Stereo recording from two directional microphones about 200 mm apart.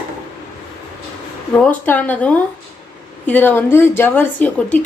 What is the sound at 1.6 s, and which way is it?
A woman's voice, 10° left (ahead or behind).